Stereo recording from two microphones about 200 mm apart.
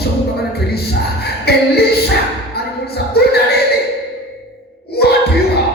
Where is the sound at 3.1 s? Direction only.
55° left (ahead or behind).